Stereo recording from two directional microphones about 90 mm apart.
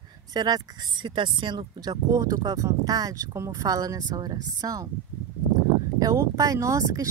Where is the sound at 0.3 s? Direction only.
50° right (ahead or behind).